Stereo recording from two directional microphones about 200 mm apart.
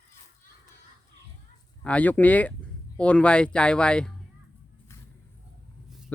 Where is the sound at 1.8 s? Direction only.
5° left (ahead or behind).